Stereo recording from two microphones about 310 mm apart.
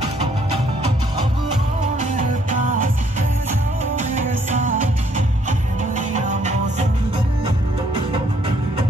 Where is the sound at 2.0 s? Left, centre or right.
Right.